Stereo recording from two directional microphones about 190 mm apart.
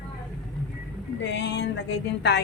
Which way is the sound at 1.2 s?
70° left (ahead or behind).